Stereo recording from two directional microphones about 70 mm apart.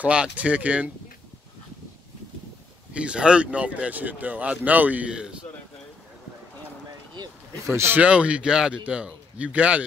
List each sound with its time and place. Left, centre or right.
0.0 s speech: centre
2.9 s speech: centre
7.6 s speech: right
7.9 s a man's voice: centre